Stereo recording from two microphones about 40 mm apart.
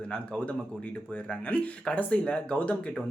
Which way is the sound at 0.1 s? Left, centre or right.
Left.